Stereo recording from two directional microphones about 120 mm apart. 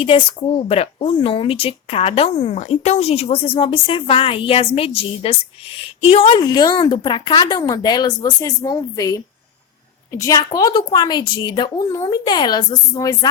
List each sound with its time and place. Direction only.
0.0 s speech: 50° left (ahead or behind)
2.6 s speech: 70° left (ahead or behind); by 6.4 s 55° left (ahead or behind)
6.4 s speech: 35° left (ahead or behind)